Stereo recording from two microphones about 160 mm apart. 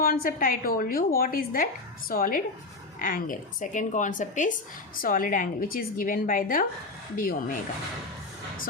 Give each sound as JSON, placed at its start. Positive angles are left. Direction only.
{"t": 0.0, "sound": "a woman's voice", "side_deg": 65}